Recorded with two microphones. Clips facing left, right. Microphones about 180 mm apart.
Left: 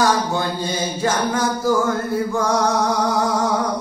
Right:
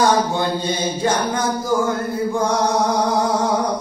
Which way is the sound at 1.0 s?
20° right (ahead or behind).